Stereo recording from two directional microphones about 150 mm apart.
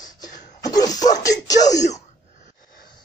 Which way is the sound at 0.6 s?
25° left (ahead or behind).